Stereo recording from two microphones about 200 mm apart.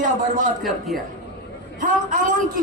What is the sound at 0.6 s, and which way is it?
Speech, centre (ahead or behind).